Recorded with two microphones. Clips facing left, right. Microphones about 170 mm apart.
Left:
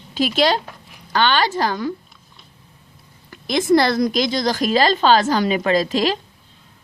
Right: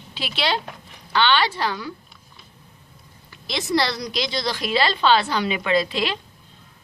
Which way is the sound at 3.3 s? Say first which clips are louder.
Left 9 dB; 50° left (ahead or behind).